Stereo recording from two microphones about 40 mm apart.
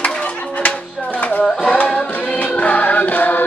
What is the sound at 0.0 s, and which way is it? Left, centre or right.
Music, left.